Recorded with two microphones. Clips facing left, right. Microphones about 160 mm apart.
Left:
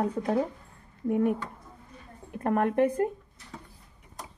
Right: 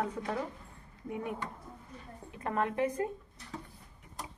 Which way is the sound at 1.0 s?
55° left (ahead or behind).